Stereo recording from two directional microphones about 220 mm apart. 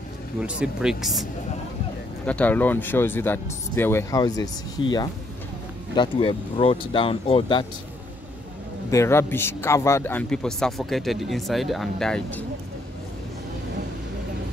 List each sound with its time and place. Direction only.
0.4 s a man's voice: 5° right (ahead or behind)
2.2 s speech: 5° left (ahead or behind); by 7.6 s 25° left (ahead or behind)
8.9 s a man's voice: 10° left (ahead or behind)